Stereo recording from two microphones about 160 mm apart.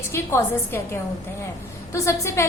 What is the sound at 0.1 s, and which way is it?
Speech, 15° left (ahead or behind).